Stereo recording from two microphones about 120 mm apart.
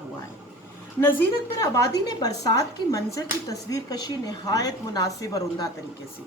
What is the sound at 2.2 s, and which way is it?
Speech, 30° left (ahead or behind).